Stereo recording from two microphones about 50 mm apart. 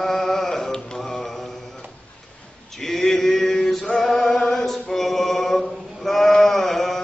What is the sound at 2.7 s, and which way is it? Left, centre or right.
Male singing, centre.